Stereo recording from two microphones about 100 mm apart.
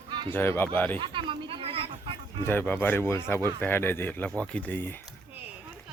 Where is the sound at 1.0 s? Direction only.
55° right (ahead or behind); by 2.1 s 70° right (ahead or behind).